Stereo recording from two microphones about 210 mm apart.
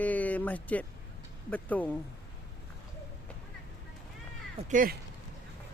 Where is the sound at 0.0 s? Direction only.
5° left (ahead or behind).